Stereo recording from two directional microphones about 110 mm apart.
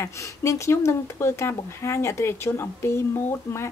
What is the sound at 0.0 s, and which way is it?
Speech, 25° left (ahead or behind).